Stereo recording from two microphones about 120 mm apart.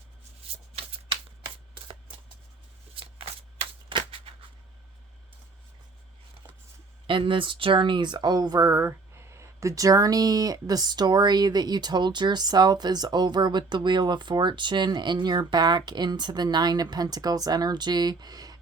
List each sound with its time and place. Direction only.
0.4 s shuffling cards: 55° right (ahead or behind)
1.5 s shuffling cards: 40° right (ahead or behind)
2.9 s shuffling cards: 50° right (ahead or behind)
7.1 s speech: 45° right (ahead or behind)